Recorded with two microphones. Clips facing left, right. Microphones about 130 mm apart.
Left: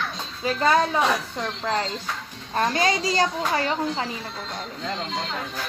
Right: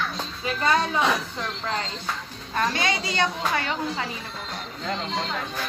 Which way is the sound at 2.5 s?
40° left (ahead or behind).